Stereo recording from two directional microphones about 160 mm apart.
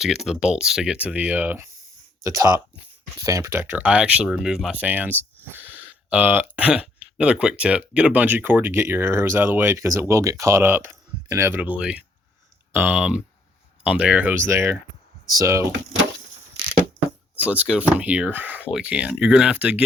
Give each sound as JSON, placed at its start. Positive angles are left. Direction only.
{"t": 0.0, "sound": "speech", "side_deg": 0}
{"t": 17.4, "sound": "speech", "side_deg": -10}